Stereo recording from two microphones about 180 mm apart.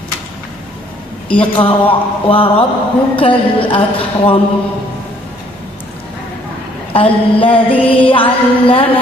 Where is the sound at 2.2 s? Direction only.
30° left (ahead or behind).